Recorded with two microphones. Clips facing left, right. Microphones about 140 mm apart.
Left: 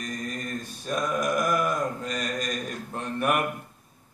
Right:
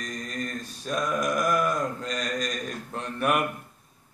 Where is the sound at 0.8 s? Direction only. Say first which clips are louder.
Even; centre (ahead or behind).